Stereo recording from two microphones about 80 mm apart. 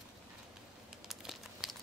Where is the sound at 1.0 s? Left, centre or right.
Centre.